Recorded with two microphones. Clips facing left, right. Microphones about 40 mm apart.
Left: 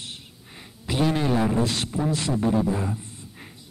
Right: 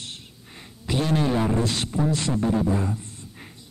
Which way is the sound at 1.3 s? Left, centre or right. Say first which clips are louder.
Left 1 dB; centre.